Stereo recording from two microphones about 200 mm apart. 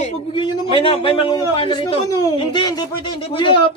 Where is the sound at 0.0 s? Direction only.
25° left (ahead or behind).